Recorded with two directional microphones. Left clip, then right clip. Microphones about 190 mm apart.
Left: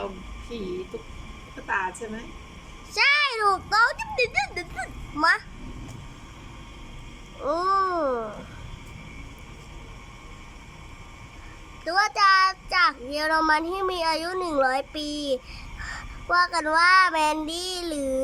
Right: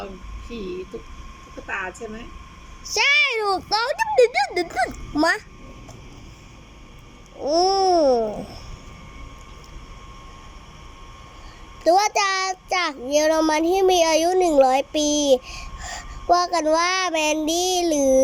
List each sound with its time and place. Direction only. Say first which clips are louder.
2.9 s child singing: right 3 dB; 10° right (ahead or behind)
4.1 s speech: right 8 dB; 30° right (ahead or behind)
7.4 s child singing: right 5 dB; 5° right (ahead or behind)
11.9 s child singing: right 2 dB; 15° right (ahead or behind)